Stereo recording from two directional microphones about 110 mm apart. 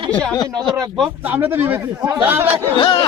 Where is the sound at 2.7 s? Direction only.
50° left (ahead or behind).